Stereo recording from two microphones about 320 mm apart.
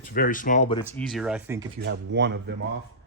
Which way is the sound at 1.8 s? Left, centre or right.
Right.